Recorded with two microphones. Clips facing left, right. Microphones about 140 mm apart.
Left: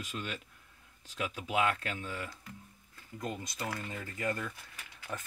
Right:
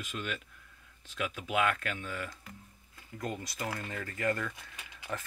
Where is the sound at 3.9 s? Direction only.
15° left (ahead or behind).